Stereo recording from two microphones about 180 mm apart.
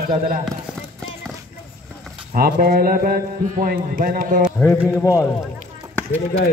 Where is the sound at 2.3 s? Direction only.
55° right (ahead or behind).